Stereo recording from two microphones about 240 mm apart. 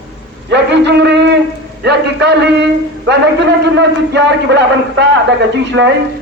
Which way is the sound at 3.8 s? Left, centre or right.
Right.